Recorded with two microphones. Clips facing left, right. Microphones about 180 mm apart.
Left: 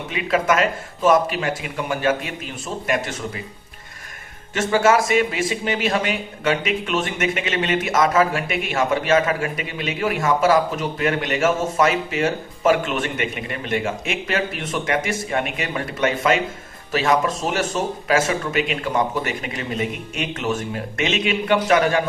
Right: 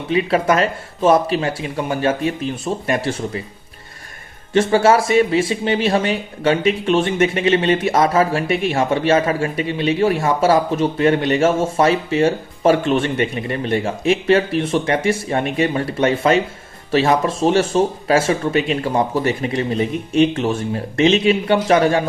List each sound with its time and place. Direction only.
0.1 s speech: 35° right (ahead or behind)
4.5 s speech: 30° right (ahead or behind)